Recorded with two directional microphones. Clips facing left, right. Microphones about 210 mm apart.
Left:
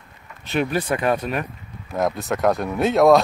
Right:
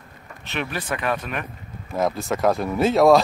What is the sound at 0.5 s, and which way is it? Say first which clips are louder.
Speech: left 6 dB; 40° left (ahead or behind).